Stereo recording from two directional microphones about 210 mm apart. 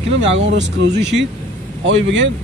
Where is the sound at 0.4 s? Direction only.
60° right (ahead or behind).